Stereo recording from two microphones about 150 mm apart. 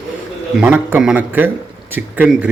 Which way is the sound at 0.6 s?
10° right (ahead or behind).